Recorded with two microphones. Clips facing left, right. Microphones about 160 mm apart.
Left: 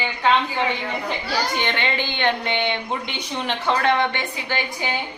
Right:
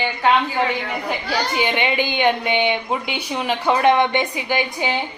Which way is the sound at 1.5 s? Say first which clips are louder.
Right 4 dB; 10° right (ahead or behind).